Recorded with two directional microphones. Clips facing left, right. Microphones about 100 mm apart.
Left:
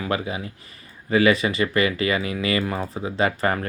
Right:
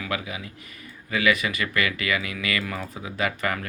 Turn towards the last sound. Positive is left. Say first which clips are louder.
# left 5 dB
turn(degrees=35)  # may be behind; listen again after turning